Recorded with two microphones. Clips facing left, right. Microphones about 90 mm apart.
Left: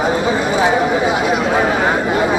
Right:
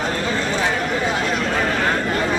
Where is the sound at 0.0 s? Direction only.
15° left (ahead or behind).